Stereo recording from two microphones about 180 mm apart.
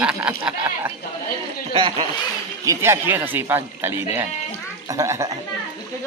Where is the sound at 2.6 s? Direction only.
15° right (ahead or behind).